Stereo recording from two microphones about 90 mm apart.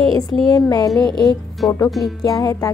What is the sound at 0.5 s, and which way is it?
Music, 45° left (ahead or behind).